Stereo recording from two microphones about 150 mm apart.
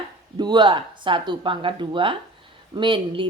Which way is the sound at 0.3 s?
30° right (ahead or behind).